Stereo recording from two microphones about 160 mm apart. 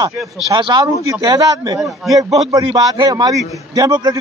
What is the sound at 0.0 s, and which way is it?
A man's voice, 25° right (ahead or behind).